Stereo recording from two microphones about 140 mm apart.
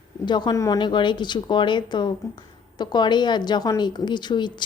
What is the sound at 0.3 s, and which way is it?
Speech, 30° left (ahead or behind).